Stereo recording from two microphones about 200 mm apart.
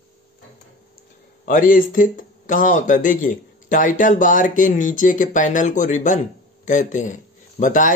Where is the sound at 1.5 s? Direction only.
40° left (ahead or behind).